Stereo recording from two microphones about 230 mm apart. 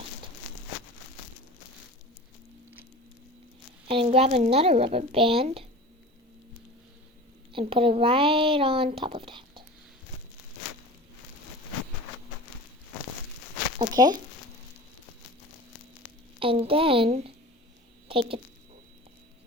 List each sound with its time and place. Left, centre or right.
3.8 s speech: right
7.5 s speech: right
13.7 s speech: centre
16.4 s a woman's voice: right